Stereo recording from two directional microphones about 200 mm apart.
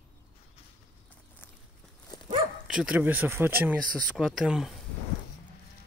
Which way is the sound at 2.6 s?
5° right (ahead or behind).